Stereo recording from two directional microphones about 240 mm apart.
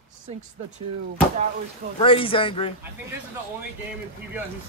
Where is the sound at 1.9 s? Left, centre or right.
Left.